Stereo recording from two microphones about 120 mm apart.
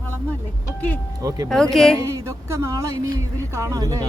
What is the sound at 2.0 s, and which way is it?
Speech, 25° right (ahead or behind).